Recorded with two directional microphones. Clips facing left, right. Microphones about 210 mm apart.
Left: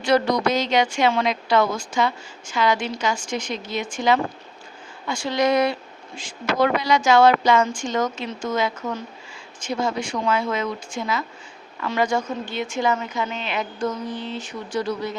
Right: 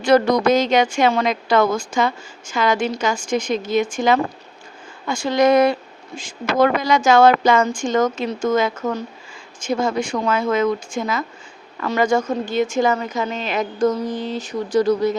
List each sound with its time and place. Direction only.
0.0 s a woman's voice: 50° right (ahead or behind)